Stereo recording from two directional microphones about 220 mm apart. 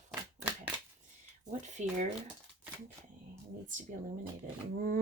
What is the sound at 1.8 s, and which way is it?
Speech, 35° right (ahead or behind).